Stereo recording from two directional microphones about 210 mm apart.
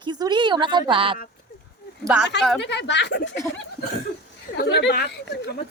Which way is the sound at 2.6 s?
60° left (ahead or behind).